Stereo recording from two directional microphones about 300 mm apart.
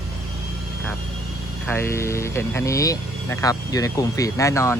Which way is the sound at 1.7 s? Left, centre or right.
Centre.